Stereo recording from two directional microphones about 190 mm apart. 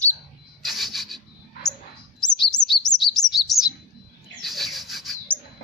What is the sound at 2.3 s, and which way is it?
Chirp, 20° left (ahead or behind).